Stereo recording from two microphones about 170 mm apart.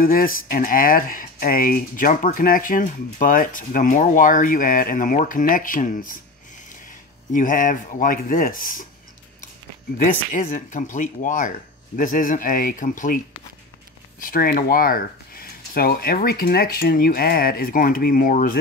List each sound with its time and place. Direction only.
0.0 s speech: 55° left (ahead or behind)
7.3 s speech: 50° left (ahead or behind)
9.9 s speech: 55° left (ahead or behind)
14.2 s speech: 60° left (ahead or behind)